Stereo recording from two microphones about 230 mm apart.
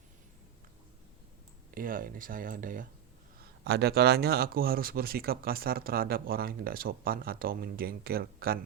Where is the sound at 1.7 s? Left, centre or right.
Right.